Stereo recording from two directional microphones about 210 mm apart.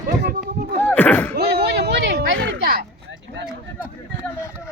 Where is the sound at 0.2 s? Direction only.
50° right (ahead or behind).